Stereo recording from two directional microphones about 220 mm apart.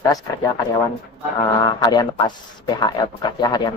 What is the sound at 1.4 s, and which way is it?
Speech, 20° left (ahead or behind).